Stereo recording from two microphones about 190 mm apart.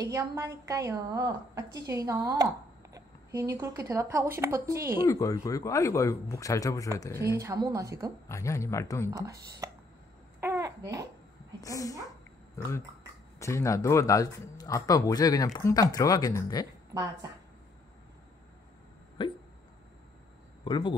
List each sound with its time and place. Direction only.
0.0 s a woman's voice: 20° right (ahead or behind)
5.0 s speech: 15° left (ahead or behind)
7.3 s a woman's voice: 15° right (ahead or behind)
8.3 s speech: 15° left (ahead or behind)
9.1 s a woman's voice: 15° right (ahead or behind)
10.4 s babbling: 15° right (ahead or behind)
11.6 s speech: 20° left (ahead or behind)
13.4 s speech: 15° left (ahead or behind)
19.2 s hiccup: 25° left (ahead or behind)
20.6 s speech: 25° left (ahead or behind)